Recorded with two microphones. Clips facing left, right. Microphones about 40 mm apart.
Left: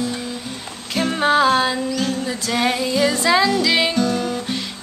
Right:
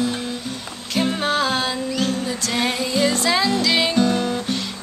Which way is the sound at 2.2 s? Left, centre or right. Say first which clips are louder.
Left 2 dB; centre.